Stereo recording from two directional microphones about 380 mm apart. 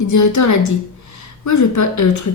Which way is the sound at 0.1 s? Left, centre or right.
Left.